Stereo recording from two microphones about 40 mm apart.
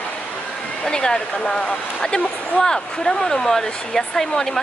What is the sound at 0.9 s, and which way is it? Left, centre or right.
Speech, centre.